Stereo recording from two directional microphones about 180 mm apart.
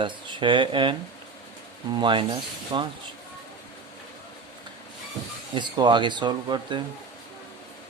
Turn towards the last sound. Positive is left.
turn(degrees=-25)  # may be behind; listen again after turning